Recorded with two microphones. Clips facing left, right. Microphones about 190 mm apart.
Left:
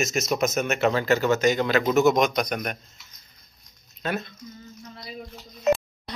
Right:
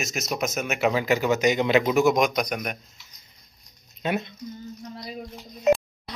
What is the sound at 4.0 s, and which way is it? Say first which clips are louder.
Speech: right 2 dB; 20° right (ahead or behind).